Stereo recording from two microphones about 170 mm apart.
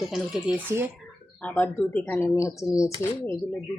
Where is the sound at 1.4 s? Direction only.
10° left (ahead or behind).